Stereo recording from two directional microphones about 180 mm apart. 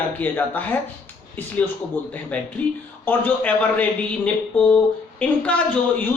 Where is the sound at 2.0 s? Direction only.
10° left (ahead or behind).